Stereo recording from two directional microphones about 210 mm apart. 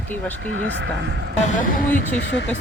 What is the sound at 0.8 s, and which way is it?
Speech, 55° right (ahead or behind).